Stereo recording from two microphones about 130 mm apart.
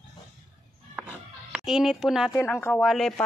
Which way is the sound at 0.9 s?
15° right (ahead or behind).